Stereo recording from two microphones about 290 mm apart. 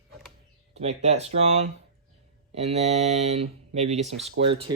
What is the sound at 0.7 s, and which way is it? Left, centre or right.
Speech, right.